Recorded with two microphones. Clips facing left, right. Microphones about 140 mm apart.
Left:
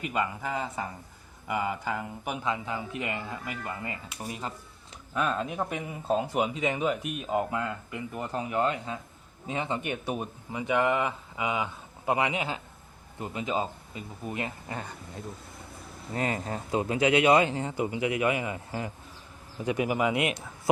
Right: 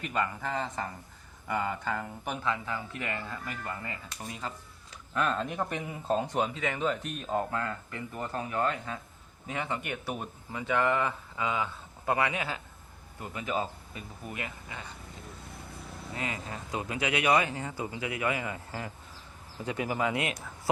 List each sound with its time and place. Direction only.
0.0 s speech: 10° left (ahead or behind)
14.7 s speech: 50° left (ahead or behind)
16.1 s speech: 40° left (ahead or behind)
16.7 s speech: 30° left (ahead or behind)